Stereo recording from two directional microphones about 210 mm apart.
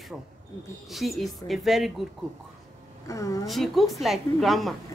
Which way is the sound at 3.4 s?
Centre (ahead or behind).